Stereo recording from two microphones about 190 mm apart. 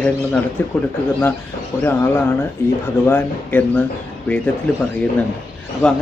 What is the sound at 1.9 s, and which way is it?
Speech, 10° left (ahead or behind).